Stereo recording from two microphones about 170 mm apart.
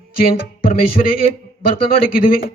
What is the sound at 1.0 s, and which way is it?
Speech, 45° left (ahead or behind).